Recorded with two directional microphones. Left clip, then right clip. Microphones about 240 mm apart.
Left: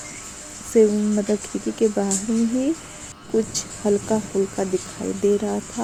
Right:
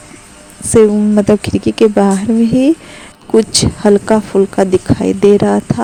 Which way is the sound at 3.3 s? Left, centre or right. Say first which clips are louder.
Right 13 dB; right.